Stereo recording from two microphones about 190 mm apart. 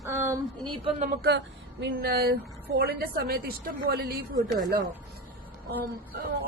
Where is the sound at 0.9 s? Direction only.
40° right (ahead or behind).